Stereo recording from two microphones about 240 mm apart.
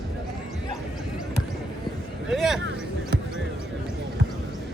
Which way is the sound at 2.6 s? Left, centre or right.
Right.